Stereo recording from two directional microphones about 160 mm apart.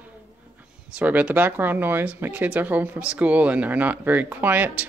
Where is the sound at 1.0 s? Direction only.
10° right (ahead or behind).